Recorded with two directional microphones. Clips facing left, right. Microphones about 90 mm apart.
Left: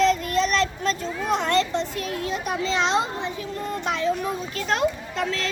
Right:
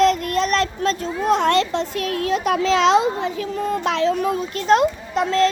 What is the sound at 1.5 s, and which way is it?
A child's voice, 80° right.